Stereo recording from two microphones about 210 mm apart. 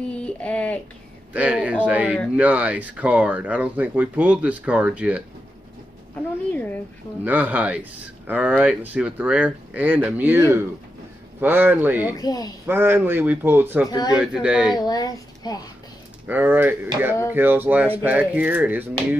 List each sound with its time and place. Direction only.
0.2 s a sound: 5° left (ahead or behind)
1.3 s speech: 5° right (ahead or behind)
6.5 s speech: 10° left (ahead or behind)
7.2 s speech: 5° right (ahead or behind)
12.2 s speech: 15° left (ahead or behind)
12.6 s speech: 10° right (ahead or behind)
13.8 s speech: 20° left (ahead or behind)
14.1 s speech: 5° right (ahead or behind)
14.8 s a sound: 20° left (ahead or behind)
16.3 s speech: 10° right (ahead or behind)